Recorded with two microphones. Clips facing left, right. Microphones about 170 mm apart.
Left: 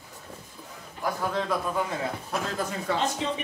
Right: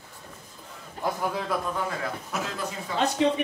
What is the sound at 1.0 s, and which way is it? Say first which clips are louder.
Speech: right 1 dB; 25° right (ahead or behind).